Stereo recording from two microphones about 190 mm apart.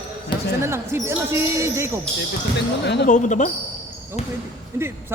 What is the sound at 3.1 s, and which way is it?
Speech, 40° left (ahead or behind).